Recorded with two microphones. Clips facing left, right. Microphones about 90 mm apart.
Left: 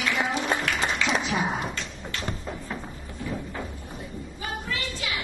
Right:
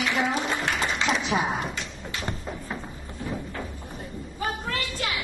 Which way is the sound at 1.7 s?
15° right (ahead or behind).